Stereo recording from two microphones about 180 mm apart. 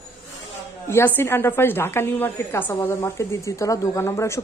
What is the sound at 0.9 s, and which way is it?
A woman's voice, 15° left (ahead or behind).